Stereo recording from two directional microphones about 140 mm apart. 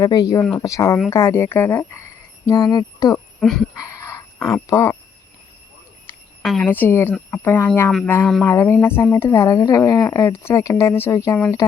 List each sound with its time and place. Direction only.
0.0 s a woman's voice: 25° left (ahead or behind)
3.4 s speech: 5° left (ahead or behind)
3.8 s dog: 20° left (ahead or behind)
6.4 s a woman's voice: centre (ahead or behind)
6.7 s a woman's voice: 15° left (ahead or behind)